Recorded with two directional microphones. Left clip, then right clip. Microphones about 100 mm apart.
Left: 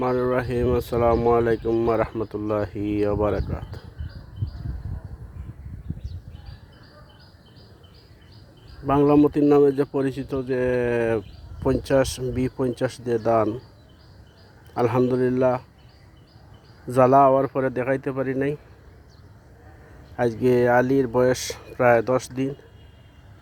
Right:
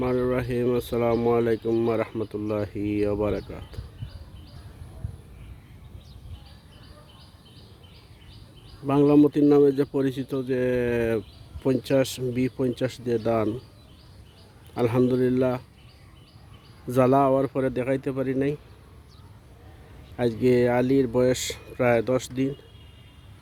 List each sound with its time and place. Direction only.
0.0 s speech: 15° right (ahead or behind)
8.9 s speech: 20° right (ahead or behind)
14.8 s speech: 20° right (ahead or behind)
16.8 s speech: 15° right (ahead or behind)
20.4 s speech: 15° right (ahead or behind)